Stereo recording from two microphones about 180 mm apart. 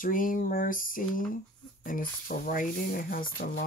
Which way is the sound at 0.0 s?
50° left (ahead or behind).